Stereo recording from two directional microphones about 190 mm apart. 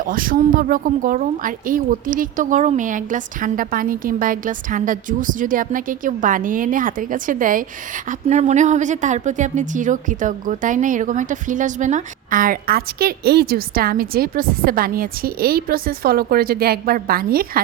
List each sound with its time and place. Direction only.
0.0 s a woman's voice: 45° right (ahead or behind)